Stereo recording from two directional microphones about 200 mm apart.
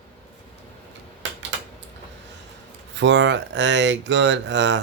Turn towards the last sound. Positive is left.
turn(degrees=-65)  # may be behind; listen again after turning